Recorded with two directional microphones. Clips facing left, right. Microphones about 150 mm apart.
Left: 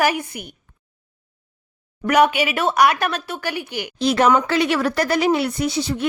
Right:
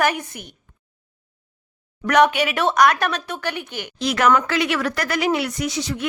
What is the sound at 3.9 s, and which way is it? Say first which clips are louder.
Speech: left 2 dB; 30° left (ahead or behind).